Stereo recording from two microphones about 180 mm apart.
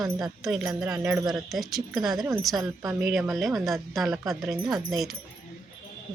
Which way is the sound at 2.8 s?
15° right (ahead or behind).